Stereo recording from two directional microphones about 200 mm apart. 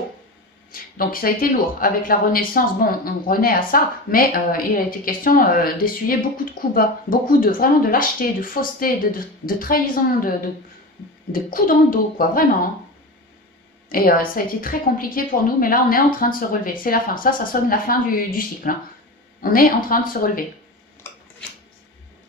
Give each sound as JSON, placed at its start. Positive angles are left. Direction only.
{"t": 0.7, "sound": "speech", "side_deg": 45}
{"t": 11.3, "sound": "speech", "side_deg": 45}
{"t": 13.9, "sound": "speech", "side_deg": 45}
{"t": 21.0, "sound": "a sound", "side_deg": 10}